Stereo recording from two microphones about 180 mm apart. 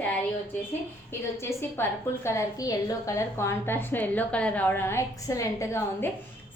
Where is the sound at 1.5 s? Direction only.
15° left (ahead or behind).